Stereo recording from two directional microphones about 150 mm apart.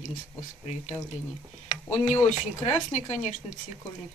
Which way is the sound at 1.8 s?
50° left (ahead or behind).